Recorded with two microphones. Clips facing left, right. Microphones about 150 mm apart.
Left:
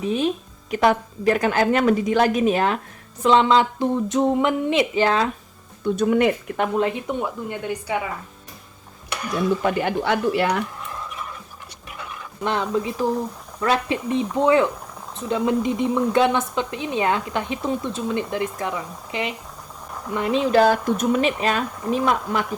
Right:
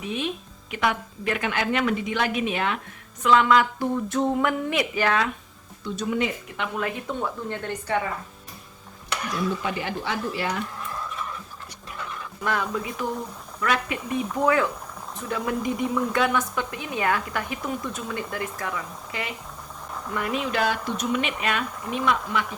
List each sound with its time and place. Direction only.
0.0 s a woman's voice: 35° left (ahead or behind)
3.2 s a woman's voice: 30° left (ahead or behind)
5.8 s speech: 55° left (ahead or behind)
6.7 s a woman's voice: 25° left (ahead or behind)
9.6 s speech: 55° left (ahead or behind)
12.4 s a woman's voice: 25° left (ahead or behind)